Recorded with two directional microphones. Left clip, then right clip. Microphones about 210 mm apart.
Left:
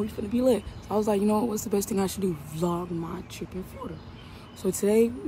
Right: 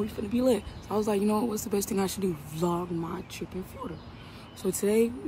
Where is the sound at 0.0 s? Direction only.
10° right (ahead or behind).